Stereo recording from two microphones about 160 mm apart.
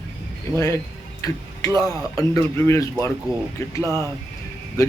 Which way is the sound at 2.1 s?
20° left (ahead or behind).